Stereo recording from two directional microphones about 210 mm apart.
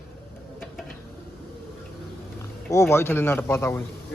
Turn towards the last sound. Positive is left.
turn(degrees=10)  # may be behind; listen again after turning